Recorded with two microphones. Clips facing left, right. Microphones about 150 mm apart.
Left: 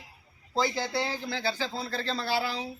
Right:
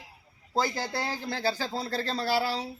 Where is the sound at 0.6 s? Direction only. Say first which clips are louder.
Left 2 dB; 40° right (ahead or behind).